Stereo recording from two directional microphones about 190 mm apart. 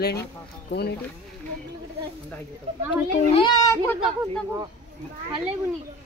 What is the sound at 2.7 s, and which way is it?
Speech, 30° right (ahead or behind).